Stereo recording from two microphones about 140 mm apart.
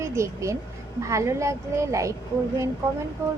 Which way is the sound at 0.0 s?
20° right (ahead or behind).